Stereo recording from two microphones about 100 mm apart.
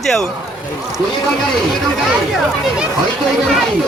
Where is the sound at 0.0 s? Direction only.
5° left (ahead or behind).